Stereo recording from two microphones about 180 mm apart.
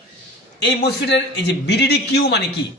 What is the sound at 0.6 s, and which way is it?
A man's voice, 70° left (ahead or behind).